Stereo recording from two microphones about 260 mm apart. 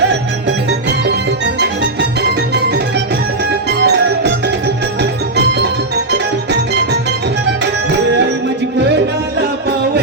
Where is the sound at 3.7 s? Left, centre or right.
Right.